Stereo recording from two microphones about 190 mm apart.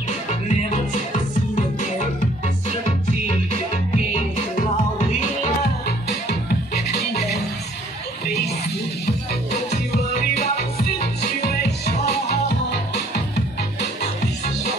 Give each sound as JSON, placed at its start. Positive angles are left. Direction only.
{"t": 3.3, "sound": "music", "side_deg": 35}
{"t": 5.9, "sound": "music", "side_deg": 60}
{"t": 10.1, "sound": "music", "side_deg": 55}